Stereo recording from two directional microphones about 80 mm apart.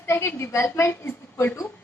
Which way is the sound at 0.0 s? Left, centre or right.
Left.